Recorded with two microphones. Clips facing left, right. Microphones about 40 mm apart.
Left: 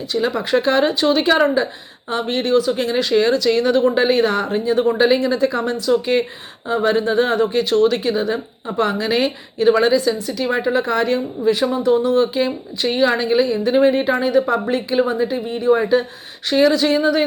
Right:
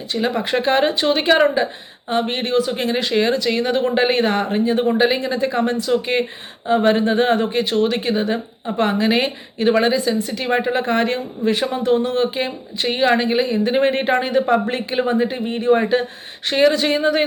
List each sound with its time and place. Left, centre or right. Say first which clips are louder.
0.1 s speech: left 2 dB; right
4.9 s speech: left 4 dB; centre
5.2 s a woman's voice: left 1 dB; right